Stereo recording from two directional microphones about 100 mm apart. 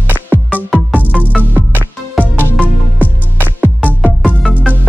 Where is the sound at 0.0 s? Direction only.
20° right (ahead or behind).